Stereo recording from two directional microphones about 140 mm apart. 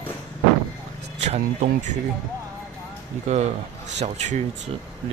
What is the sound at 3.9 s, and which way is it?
Speech, 50° right (ahead or behind).